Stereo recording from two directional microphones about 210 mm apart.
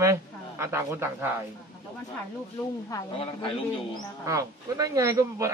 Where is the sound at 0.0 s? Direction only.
15° right (ahead or behind).